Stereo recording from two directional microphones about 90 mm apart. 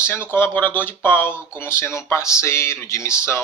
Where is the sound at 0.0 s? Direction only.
25° left (ahead or behind).